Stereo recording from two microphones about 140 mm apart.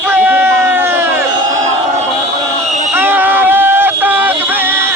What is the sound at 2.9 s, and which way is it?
Music, 15° right (ahead or behind).